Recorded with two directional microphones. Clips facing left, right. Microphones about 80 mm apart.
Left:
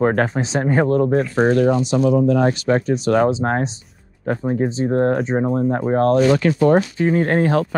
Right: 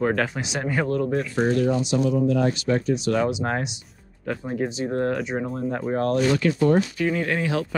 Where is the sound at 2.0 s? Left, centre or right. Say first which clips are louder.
Left 7 dB; left.